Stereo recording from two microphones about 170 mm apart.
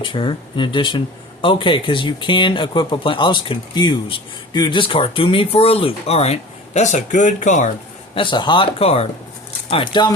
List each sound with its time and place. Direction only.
0.0 s speech: 30° left (ahead or behind); by 7.7 s 45° left (ahead or behind)
8.1 s speech: 30° left (ahead or behind)